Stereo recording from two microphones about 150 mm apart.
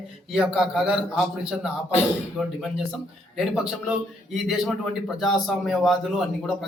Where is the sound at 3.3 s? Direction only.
5° right (ahead or behind).